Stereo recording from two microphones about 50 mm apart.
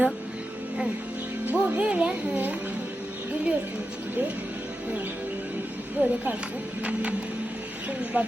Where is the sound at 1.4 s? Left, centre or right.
Right.